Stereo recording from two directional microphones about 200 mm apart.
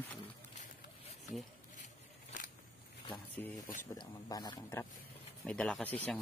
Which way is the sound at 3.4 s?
10° left (ahead or behind).